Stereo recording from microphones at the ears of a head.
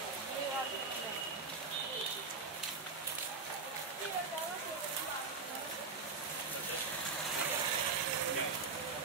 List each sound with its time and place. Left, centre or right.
7.4 s vehicle: right